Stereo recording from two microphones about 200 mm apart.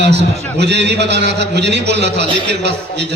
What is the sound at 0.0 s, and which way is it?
A man's voice, 60° right (ahead or behind).